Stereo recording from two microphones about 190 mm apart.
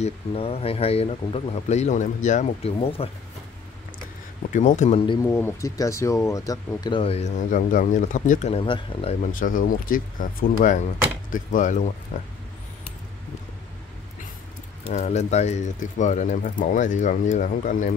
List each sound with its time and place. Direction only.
0.0 s speech: 30° left (ahead or behind)
4.5 s speech: 40° left (ahead or behind)
5.2 s speech: 15° left (ahead or behind)
9.2 s speech: 45° left (ahead or behind)
14.9 s speech: 35° left (ahead or behind)